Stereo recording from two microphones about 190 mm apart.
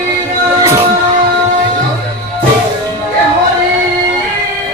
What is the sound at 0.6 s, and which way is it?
Music, 15° right (ahead or behind).